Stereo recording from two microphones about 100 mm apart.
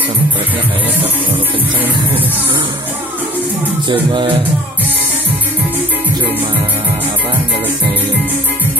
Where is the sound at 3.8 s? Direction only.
55° right (ahead or behind).